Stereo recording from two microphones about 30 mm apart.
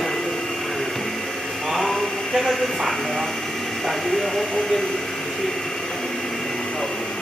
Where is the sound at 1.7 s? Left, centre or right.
Centre.